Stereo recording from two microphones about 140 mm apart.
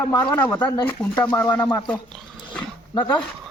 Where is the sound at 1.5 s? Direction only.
30° left (ahead or behind).